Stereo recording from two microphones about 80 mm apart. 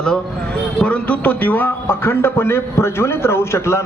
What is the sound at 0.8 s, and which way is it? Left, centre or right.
A man's voice, centre.